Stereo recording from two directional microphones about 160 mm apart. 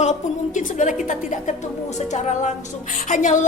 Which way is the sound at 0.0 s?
50° left (ahead or behind).